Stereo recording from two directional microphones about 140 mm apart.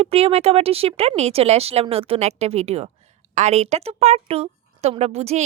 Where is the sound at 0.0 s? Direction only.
45° right (ahead or behind).